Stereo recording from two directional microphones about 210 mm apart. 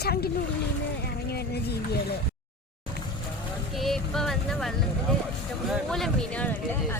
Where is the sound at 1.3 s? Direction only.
50° left (ahead or behind).